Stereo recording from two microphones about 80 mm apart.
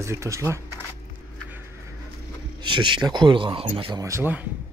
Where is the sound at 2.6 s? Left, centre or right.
Right.